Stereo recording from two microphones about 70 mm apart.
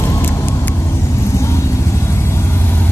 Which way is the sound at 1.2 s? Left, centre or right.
Left.